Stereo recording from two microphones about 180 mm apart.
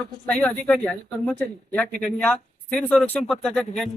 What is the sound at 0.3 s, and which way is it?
Speech, 5° left (ahead or behind).